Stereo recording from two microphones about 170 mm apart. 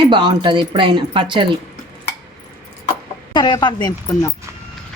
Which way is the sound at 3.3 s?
25° left (ahead or behind).